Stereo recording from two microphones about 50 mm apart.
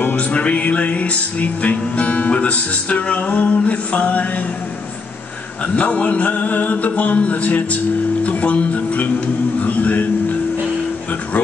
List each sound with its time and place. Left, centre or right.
0.0 s music: left
5.8 s music: left